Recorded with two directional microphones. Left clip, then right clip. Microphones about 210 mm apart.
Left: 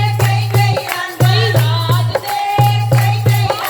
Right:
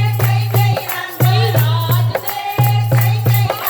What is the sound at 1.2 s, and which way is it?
Music, 20° left (ahead or behind).